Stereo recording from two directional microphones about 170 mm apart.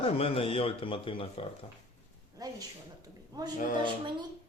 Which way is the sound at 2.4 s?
20° right (ahead or behind).